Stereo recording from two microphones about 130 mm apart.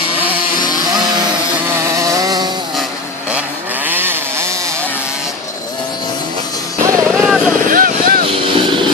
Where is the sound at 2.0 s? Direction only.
25° right (ahead or behind).